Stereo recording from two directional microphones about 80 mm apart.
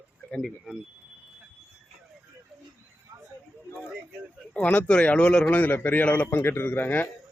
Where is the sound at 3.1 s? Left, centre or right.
Right.